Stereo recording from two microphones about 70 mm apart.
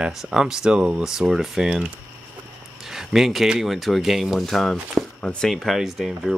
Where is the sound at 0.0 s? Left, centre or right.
Centre.